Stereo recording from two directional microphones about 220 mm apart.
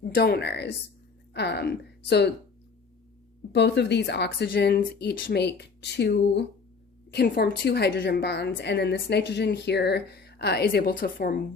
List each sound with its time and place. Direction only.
0.0 s a woman's voice: 45° left (ahead or behind)
3.5 s a woman's voice: 50° left (ahead or behind)